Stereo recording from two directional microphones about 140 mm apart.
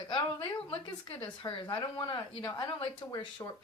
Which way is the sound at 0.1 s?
40° left (ahead or behind).